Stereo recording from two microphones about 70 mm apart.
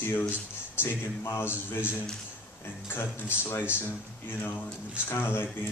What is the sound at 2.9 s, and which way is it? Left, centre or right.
A man's voice, left.